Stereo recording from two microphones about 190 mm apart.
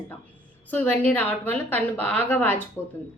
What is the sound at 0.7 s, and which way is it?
A woman's voice, 10° left (ahead or behind).